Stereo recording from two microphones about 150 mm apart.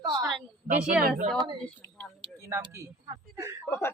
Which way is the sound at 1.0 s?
60° right (ahead or behind).